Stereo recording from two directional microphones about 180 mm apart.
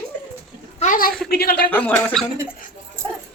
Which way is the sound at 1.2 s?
60° left (ahead or behind).